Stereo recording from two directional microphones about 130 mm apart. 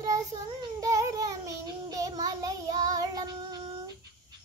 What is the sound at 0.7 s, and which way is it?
Child singing, 25° right (ahead or behind).